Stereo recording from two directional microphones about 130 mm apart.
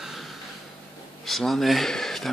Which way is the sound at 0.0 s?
Centre (ahead or behind).